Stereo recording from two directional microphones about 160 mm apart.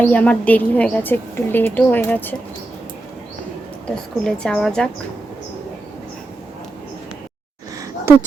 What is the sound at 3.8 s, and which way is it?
A woman's voice, 5° left (ahead or behind).